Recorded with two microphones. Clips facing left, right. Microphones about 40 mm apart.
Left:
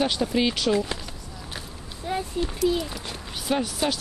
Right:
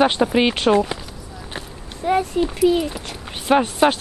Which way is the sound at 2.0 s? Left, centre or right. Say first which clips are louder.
Right 10 dB; right.